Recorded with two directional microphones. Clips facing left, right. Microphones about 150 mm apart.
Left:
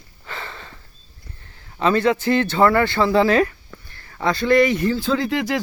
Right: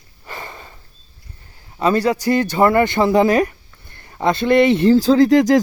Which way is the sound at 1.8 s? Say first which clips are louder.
Right 1 dB; 10° right (ahead or behind).